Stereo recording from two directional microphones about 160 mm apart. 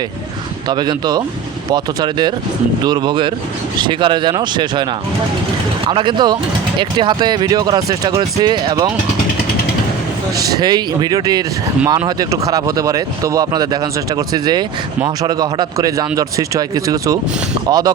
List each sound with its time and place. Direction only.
0.7 s speech: 25° right (ahead or behind)
10.6 s speech: 25° right (ahead or behind)